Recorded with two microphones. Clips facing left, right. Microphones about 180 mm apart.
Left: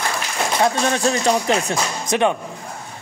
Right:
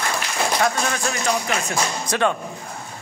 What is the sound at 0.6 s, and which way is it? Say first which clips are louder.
Speech: left 4 dB; 30° left (ahead or behind).